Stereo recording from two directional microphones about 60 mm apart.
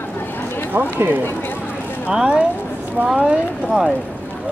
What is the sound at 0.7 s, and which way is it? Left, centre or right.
Speech, right.